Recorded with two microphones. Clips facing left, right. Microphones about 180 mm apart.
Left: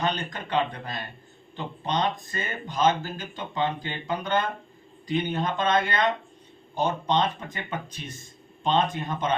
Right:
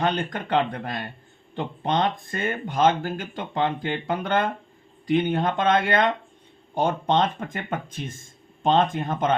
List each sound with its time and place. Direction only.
0.0 s speech: 55° right (ahead or behind)